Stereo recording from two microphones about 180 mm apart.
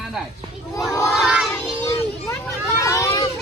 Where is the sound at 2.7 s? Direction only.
15° left (ahead or behind).